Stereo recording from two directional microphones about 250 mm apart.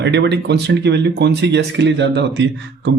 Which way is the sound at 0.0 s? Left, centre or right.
Right.